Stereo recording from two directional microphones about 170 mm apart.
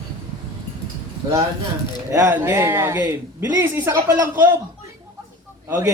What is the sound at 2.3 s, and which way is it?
Speech, 15° right (ahead or behind).